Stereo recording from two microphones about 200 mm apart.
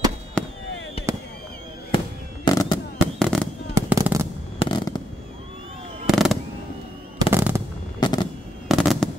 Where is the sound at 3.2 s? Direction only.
5° left (ahead or behind).